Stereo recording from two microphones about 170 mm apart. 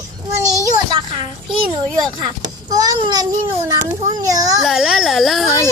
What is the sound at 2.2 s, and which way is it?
A child's voice, 20° right (ahead or behind).